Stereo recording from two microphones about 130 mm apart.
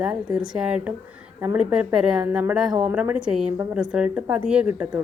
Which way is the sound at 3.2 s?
5° right (ahead or behind).